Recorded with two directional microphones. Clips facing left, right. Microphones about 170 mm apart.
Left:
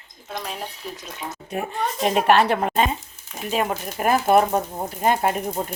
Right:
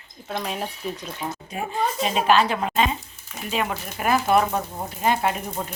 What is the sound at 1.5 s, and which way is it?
A woman's voice, 65° left (ahead or behind).